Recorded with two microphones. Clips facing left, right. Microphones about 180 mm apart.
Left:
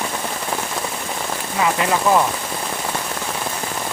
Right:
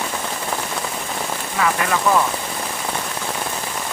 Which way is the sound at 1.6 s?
20° left (ahead or behind).